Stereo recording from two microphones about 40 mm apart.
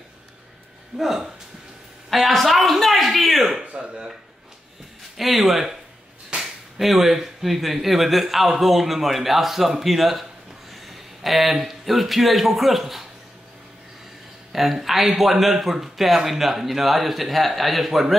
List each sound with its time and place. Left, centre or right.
0.9 s speech: centre
3.6 s a sound: right
3.9 s speech: centre
5.1 s speech: centre
10.7 s a sound: centre
11.5 s speech: centre
14.5 s speech: centre